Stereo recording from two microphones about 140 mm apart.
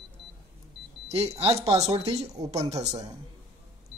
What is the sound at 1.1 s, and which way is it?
Speech, 45° right (ahead or behind).